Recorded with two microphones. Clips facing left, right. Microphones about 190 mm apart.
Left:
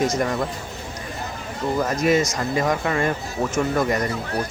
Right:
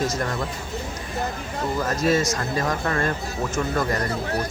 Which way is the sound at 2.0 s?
15° left (ahead or behind).